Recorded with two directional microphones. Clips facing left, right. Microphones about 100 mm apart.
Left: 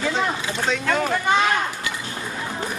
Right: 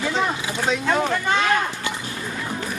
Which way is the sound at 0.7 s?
10° right (ahead or behind).